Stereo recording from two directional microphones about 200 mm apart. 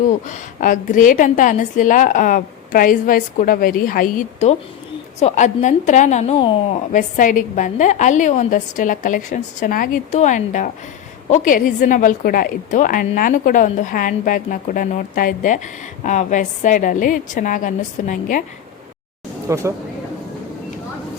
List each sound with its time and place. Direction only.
0.3 s a woman's voice: 40° left (ahead or behind)
19.5 s speech: 15° right (ahead or behind)